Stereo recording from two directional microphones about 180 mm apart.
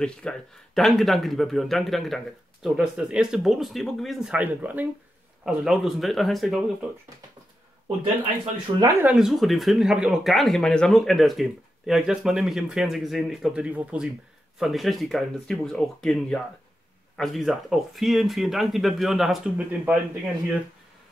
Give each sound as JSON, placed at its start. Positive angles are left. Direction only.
{"t": 0.0, "sound": "speech", "side_deg": 5}
{"t": 8.7, "sound": "speech", "side_deg": -25}
{"t": 9.0, "sound": "speech", "side_deg": 0}